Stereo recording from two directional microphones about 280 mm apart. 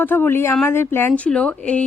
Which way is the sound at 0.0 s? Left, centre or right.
Centre.